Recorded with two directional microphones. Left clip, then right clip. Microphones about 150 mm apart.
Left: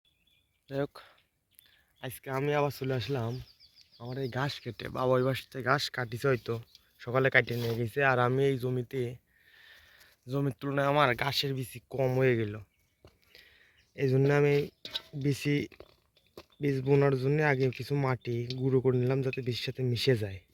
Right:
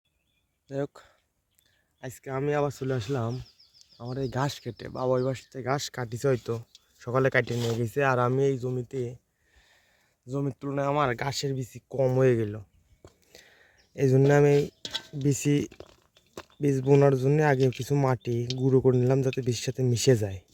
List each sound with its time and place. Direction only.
0.7 s speech: 10° right (ahead or behind); by 3.3 s 35° right (ahead or behind)
3.9 s speech: 45° right (ahead or behind)
4.9 s speech: 5° right (ahead or behind)
5.7 s speech: 20° right (ahead or behind); by 9.1 s 5° right (ahead or behind)
9.6 s a sound: 10° right (ahead or behind)
11.2 s speech: 25° right (ahead or behind)
12.1 s speech: 35° right (ahead or behind)
13.0 s a sound: 45° right (ahead or behind)
16.6 s speech: 35° right (ahead or behind)